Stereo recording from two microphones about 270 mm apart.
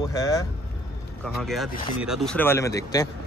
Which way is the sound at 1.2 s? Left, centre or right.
Centre.